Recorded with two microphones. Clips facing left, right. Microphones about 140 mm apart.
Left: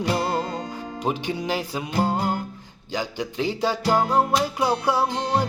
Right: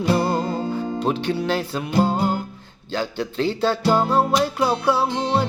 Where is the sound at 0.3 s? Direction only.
30° right (ahead or behind).